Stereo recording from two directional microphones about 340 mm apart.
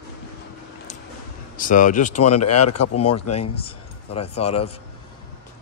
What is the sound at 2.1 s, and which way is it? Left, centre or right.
Speech, left.